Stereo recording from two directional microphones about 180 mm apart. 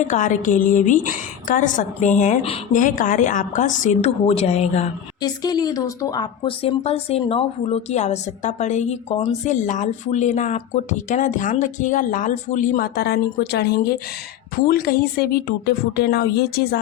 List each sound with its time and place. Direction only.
0.0 s a woman's voice: 45° left (ahead or behind)
5.2 s a woman's voice: 20° left (ahead or behind); by 16.8 s 60° left (ahead or behind)